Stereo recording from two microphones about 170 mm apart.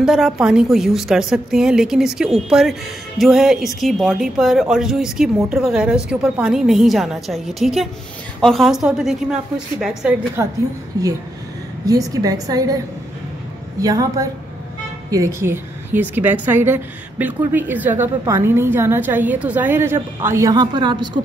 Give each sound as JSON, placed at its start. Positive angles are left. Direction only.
{"t": 0.0, "sound": "a woman's voice", "side_deg": 0}
{"t": 10.4, "sound": "a woman's voice", "side_deg": -15}
{"t": 11.8, "sound": "a woman's voice", "side_deg": -20}